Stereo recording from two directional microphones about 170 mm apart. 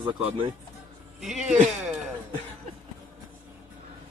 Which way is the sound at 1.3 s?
Centre (ahead or behind).